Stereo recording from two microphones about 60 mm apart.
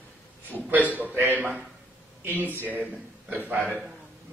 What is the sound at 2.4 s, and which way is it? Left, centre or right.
A man's voice, right.